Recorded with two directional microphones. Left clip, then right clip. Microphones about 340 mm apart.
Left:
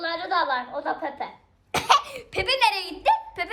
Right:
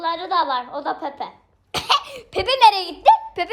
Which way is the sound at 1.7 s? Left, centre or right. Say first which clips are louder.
Even; centre.